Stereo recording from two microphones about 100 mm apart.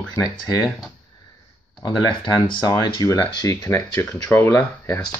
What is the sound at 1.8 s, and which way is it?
Speech, 45° left (ahead or behind).